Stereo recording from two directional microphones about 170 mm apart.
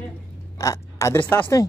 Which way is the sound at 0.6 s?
20° left (ahead or behind).